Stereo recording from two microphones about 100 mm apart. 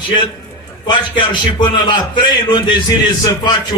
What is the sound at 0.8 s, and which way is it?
A man's voice, 50° left (ahead or behind).